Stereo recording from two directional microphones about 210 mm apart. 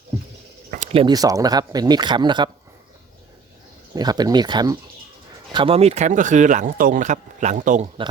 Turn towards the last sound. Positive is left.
turn(degrees=-35)  # may be behind; listen again after turning